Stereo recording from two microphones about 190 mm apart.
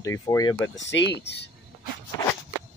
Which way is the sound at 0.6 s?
75° left (ahead or behind).